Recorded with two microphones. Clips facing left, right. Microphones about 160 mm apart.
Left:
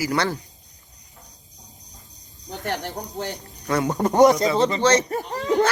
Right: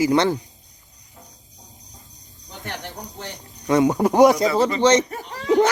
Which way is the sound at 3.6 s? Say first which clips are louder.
Right 5 dB; 15° right (ahead or behind).